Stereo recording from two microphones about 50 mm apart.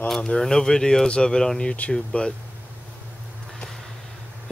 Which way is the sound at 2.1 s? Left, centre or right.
Left.